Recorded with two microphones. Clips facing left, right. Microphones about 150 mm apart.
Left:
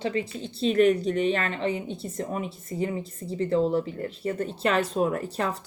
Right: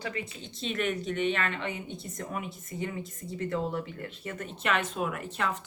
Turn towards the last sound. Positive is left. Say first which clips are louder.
# left 4 dB
turn(degrees=35)  # may be behind; listen again after turning